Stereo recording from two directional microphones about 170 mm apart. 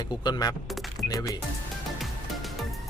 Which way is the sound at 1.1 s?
20° left (ahead or behind).